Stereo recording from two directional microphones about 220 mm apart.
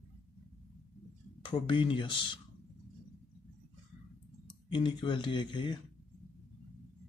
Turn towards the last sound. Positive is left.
turn(degrees=20)  # may be behind; listen again after turning